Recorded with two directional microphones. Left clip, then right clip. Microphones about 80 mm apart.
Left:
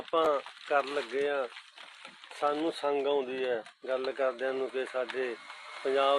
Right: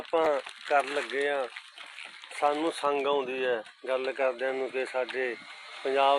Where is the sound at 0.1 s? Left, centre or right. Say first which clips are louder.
Right 1 dB; centre.